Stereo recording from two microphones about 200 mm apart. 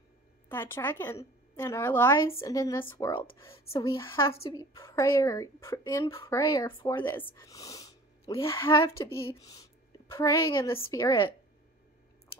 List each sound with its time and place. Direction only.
0.5 s a woman's voice: 10° left (ahead or behind)
3.7 s speech: 25° left (ahead or behind)
4.0 s a woman's voice: 15° left (ahead or behind)